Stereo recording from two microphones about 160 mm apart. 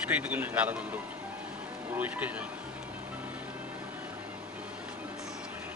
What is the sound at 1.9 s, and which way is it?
Speech, 10° right (ahead or behind).